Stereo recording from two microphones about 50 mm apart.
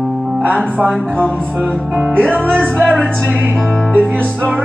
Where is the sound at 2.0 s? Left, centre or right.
Right.